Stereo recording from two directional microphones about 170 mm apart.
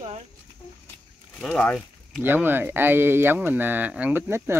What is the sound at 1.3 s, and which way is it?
Speech, 5° left (ahead or behind).